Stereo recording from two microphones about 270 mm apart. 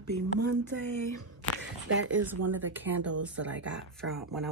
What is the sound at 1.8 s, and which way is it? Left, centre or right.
Speech, right.